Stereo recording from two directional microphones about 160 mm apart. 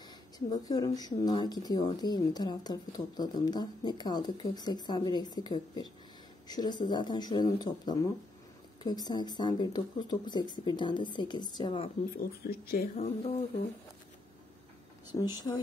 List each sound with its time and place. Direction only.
0.5 s a woman's voice: 25° left (ahead or behind)
12.4 s speech: 75° left (ahead or behind)
12.9 s a sound: 45° left (ahead or behind)
15.0 s a woman's voice: 25° left (ahead or behind)